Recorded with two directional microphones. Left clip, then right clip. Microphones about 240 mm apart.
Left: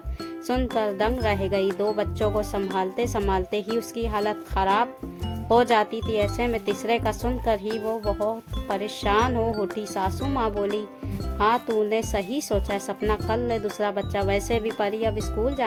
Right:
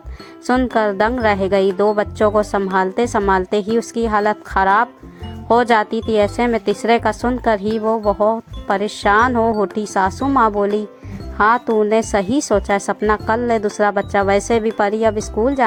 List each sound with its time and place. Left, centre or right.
0.4 s a woman's voice: centre